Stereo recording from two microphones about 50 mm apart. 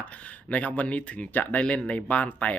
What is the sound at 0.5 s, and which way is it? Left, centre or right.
Speech, left.